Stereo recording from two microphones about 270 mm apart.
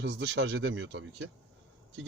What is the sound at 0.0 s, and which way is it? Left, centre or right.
Speech, right.